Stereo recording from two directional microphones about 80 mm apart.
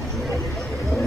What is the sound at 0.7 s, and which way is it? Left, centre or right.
Vehicle, left.